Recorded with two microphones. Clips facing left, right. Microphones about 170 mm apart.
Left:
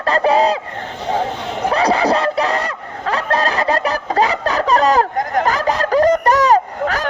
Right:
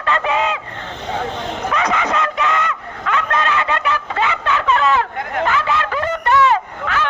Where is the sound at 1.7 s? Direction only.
35° left (ahead or behind).